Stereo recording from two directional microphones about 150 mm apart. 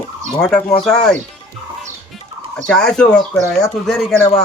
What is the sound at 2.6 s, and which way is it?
Speech, 5° left (ahead or behind).